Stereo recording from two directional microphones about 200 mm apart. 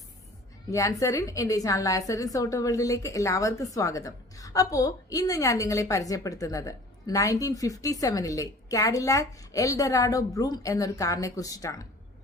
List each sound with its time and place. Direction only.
0.7 s a woman's voice: 15° left (ahead or behind)